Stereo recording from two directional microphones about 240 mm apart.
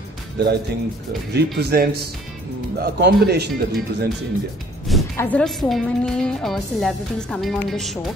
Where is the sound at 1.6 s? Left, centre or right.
Right.